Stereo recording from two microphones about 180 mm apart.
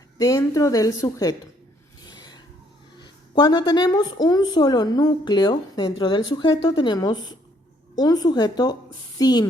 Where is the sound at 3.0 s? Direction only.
25° left (ahead or behind).